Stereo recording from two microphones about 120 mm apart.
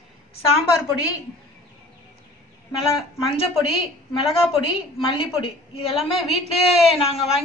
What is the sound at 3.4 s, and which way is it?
A woman's voice, 50° left (ahead or behind).